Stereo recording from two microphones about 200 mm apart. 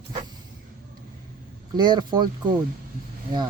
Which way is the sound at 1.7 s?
20° right (ahead or behind).